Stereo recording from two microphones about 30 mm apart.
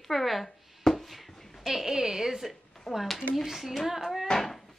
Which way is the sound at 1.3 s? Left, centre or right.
Centre.